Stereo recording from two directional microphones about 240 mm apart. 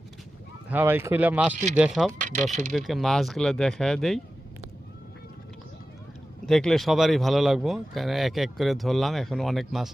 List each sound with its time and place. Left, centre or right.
0.7 s speech: centre
2.2 s speech: right
2.7 s speech: centre
6.4 s speech: centre